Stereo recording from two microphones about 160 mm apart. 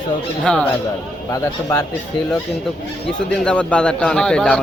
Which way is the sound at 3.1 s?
5° left (ahead or behind).